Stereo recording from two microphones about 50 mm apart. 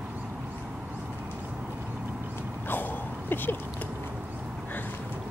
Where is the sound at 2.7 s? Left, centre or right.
Left.